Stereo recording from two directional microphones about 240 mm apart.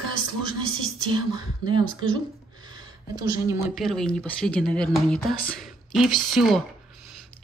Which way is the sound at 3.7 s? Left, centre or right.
Centre.